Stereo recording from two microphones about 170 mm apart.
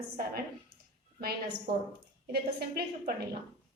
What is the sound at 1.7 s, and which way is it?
Speech, 25° right (ahead or behind).